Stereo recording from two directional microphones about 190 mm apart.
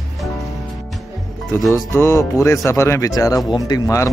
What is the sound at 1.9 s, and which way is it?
Speech, 15° left (ahead or behind).